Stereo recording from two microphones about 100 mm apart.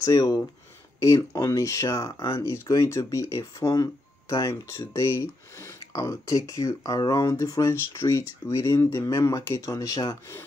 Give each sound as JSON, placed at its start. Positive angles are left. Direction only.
{"t": 0.0, "sound": "speech", "side_deg": 35}